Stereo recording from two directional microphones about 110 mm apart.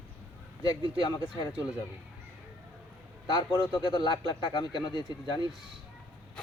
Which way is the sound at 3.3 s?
40° left (ahead or behind).